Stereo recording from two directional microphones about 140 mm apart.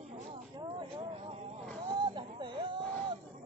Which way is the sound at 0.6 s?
35° right (ahead or behind).